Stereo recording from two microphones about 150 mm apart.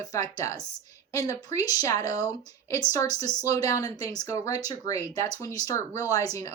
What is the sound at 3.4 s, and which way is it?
Speech, 25° left (ahead or behind).